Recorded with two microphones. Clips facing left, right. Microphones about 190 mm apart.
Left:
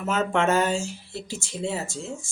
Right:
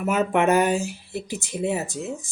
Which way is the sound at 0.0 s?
15° right (ahead or behind).